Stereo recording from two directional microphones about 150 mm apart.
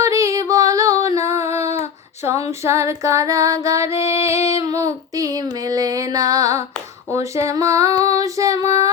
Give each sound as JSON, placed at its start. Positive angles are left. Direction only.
{"t": 0.0, "sound": "music", "side_deg": -20}
{"t": 1.5, "sound": "child singing", "side_deg": 45}
{"t": 2.5, "sound": "child singing", "side_deg": -20}
{"t": 4.3, "sound": "female singing", "side_deg": 45}
{"t": 4.5, "sound": "child singing", "side_deg": -25}